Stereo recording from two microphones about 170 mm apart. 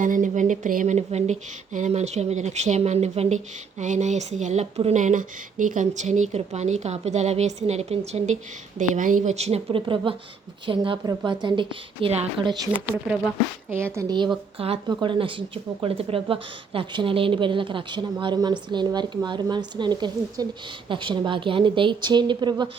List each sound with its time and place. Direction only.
0.0 s a woman's voice: 50° right (ahead or behind); by 12.8 s 30° right (ahead or behind)
13.7 s speech: 15° right (ahead or behind)
14.6 s a woman's voice: 30° right (ahead or behind)